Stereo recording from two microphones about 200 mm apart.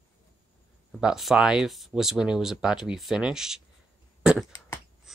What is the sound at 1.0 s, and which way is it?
Speech, centre (ahead or behind).